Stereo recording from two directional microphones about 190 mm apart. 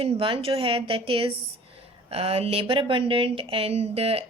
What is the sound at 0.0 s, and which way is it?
A woman's voice, 30° right (ahead or behind).